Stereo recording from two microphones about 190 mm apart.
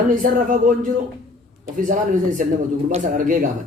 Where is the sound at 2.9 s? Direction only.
40° right (ahead or behind).